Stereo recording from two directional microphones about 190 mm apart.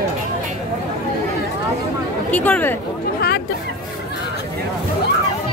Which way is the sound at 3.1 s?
55° left (ahead or behind).